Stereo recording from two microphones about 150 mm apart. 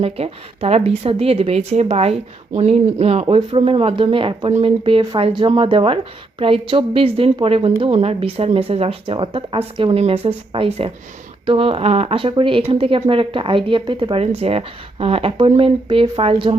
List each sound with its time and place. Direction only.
0.0 s speech: 40° right (ahead or behind)